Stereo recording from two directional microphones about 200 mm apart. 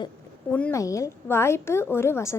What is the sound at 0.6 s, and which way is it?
A woman's voice, 10° left (ahead or behind).